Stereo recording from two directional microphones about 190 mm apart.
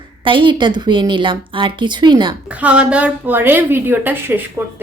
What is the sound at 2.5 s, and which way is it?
Speech, 5° right (ahead or behind).